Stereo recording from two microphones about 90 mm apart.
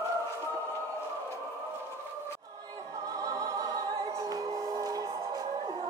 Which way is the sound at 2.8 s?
40° right (ahead or behind).